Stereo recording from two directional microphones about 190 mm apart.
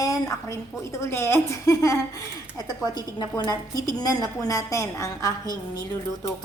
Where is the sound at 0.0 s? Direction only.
15° left (ahead or behind).